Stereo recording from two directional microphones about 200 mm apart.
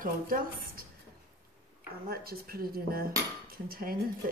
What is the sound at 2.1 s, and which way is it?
Speech, 50° right (ahead or behind).